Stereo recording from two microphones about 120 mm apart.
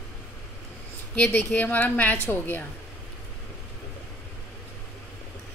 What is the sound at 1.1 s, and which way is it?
A woman's voice, 15° left (ahead or behind).